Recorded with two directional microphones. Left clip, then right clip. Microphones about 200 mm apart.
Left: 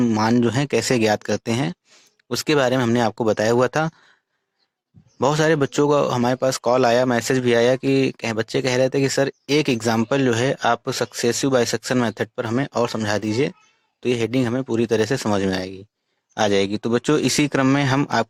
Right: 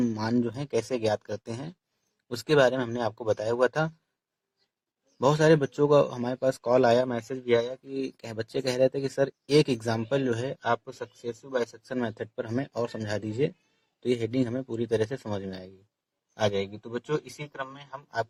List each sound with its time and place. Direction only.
0.0 s speech: 25° left (ahead or behind)
5.2 s speech: 30° left (ahead or behind)
16.8 s speech: 40° left (ahead or behind)